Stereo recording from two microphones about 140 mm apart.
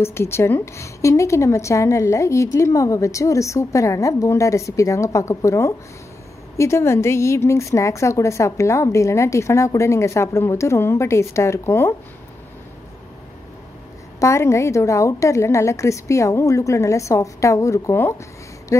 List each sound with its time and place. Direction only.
0.0 s a woman's voice: 20° left (ahead or behind)
14.2 s a woman's voice: 20° left (ahead or behind)
18.7 s a sound: 20° left (ahead or behind)